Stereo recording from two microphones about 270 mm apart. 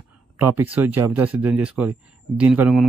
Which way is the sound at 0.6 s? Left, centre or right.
Centre.